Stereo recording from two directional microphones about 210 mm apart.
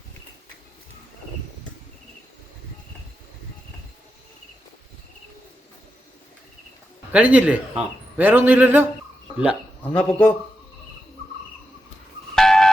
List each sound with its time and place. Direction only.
7.1 s a man's voice: 5° right (ahead or behind)
9.8 s speech: 5° left (ahead or behind)
12.3 s music: centre (ahead or behind)